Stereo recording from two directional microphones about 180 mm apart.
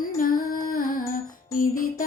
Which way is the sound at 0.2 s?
55° left (ahead or behind).